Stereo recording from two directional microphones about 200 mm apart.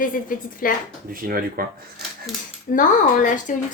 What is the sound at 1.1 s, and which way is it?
Speech, 45° right (ahead or behind).